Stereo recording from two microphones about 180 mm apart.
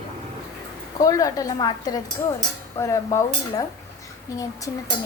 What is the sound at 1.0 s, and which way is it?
Speech, 20° left (ahead or behind).